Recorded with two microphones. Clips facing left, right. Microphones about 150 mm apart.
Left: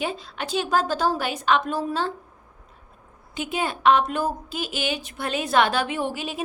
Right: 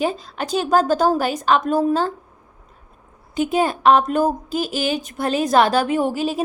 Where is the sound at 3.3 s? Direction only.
40° right (ahead or behind).